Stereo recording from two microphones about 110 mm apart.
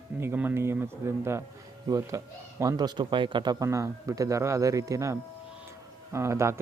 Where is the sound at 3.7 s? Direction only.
30° right (ahead or behind).